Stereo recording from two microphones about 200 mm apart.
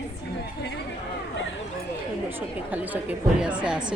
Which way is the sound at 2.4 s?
10° right (ahead or behind).